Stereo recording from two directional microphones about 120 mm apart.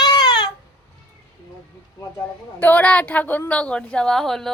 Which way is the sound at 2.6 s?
10° left (ahead or behind).